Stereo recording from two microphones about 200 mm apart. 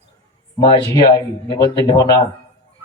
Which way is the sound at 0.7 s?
20° left (ahead or behind).